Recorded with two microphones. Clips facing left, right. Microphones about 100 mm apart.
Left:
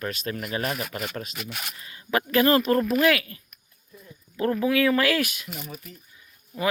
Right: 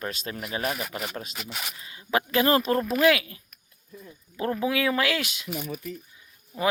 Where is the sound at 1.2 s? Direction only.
20° right (ahead or behind).